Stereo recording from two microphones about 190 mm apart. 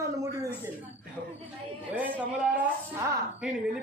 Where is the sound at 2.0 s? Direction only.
10° right (ahead or behind).